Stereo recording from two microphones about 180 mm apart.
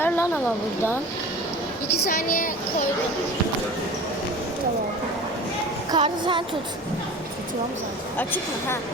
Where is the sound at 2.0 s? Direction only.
50° left (ahead or behind).